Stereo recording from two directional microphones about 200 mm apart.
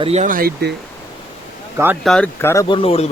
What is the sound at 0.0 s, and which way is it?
Speech, 30° right (ahead or behind).